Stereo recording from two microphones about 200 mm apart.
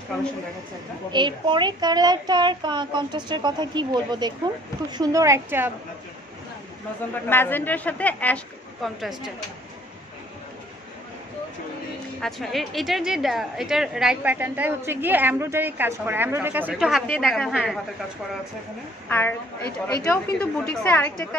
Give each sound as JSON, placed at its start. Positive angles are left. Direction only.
{"t": 1.1, "sound": "a child's voice", "side_deg": -25}
{"t": 7.2, "sound": "a woman's voice", "side_deg": 10}
{"t": 12.2, "sound": "a woman's voice", "side_deg": 0}
{"t": 19.0, "sound": "a woman's voice", "side_deg": 10}
{"t": 20.3, "sound": "a woman's voice", "side_deg": 5}